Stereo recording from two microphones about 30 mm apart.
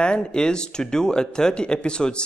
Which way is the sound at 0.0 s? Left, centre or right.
Left.